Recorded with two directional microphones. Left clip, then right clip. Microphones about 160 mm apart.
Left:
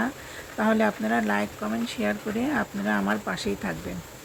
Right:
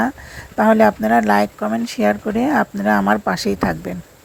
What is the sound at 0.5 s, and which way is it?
Speech, 40° right (ahead or behind).